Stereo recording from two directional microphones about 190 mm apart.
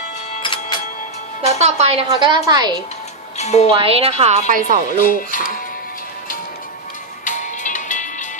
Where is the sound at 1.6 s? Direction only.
35° right (ahead or behind).